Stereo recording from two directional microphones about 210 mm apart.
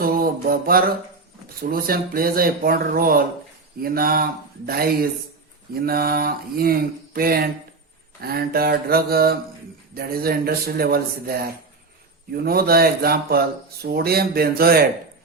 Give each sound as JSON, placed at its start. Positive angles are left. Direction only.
{"t": 0.0, "sound": "mantra", "side_deg": -45}
{"t": 1.6, "sound": "speech", "side_deg": -45}